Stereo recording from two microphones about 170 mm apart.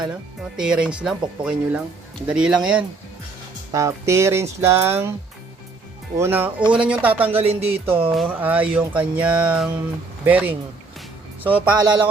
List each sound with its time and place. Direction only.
0.5 s speech: 5° right (ahead or behind)
3.7 s speech: 20° right (ahead or behind)
6.1 s speech: 15° right (ahead or behind)
7.4 s speech: 35° right (ahead or behind)
8.1 s speech: 5° right (ahead or behind)